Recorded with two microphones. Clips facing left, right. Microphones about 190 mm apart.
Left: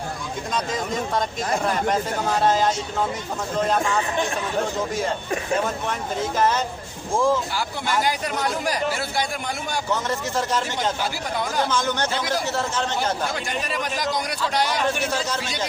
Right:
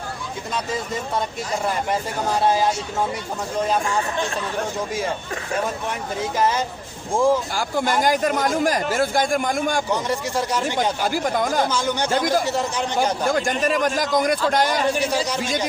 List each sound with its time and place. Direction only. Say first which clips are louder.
2.4 s speech: right 1 dB; 10° right (ahead or behind)
6.3 s speech: right 1 dB; 10° right (ahead or behind)
7.5 s speech: right 3 dB; 45° right (ahead or behind)
9.9 s speech: right 2 dB; 15° right (ahead or behind)
11.0 s speech: right 5 dB; 45° right (ahead or behind)
11.7 s speech: right 1 dB; 10° right (ahead or behind)
12.1 s speech: right 5 dB; 45° right (ahead or behind)
12.5 s speech: right 2 dB; 15° right (ahead or behind)
13.2 s speech: right 7 dB; 45° right (ahead or behind)
15.0 s speech: right 3 dB; 15° right (ahead or behind)